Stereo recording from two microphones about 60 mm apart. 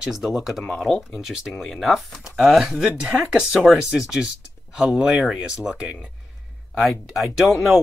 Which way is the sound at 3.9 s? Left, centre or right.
Centre.